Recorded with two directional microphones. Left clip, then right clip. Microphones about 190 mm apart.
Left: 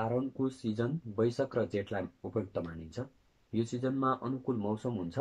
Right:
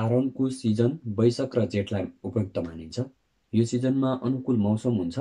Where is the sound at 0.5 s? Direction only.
5° right (ahead or behind).